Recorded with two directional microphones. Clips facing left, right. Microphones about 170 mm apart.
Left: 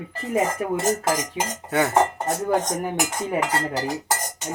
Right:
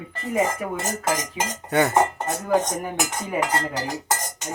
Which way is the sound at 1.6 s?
Centre (ahead or behind).